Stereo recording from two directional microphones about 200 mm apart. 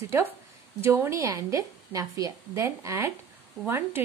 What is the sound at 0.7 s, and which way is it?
A woman's voice, 15° right (ahead or behind).